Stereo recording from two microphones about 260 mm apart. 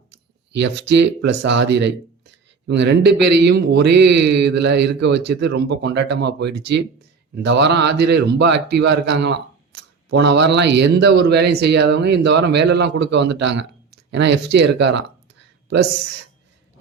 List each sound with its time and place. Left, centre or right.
0.1 s speech: right
6.4 s speech: right
7.3 s speech: right